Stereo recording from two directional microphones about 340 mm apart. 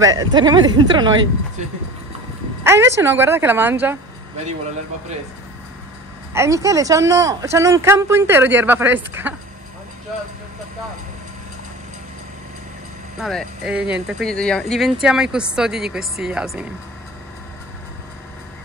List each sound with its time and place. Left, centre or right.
0.0 s speech: centre
2.6 s speech: centre
6.3 s speech: centre
13.2 s speech: centre